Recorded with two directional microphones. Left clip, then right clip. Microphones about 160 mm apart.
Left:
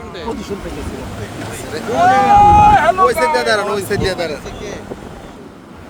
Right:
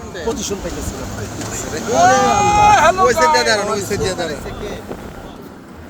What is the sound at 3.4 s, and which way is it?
Speech, 40° left (ahead or behind).